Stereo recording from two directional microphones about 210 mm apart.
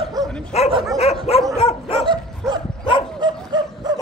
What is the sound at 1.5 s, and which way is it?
Dog, 25° left (ahead or behind).